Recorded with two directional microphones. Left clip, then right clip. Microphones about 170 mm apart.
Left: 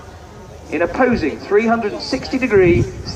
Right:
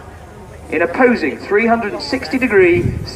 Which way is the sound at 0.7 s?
50° right (ahead or behind).